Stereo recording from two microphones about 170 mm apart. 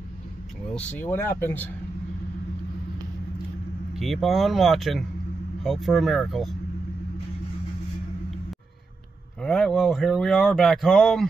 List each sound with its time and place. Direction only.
0.7 s speech: 10° left (ahead or behind)
3.9 s speech: centre (ahead or behind)
9.4 s speech: centre (ahead or behind)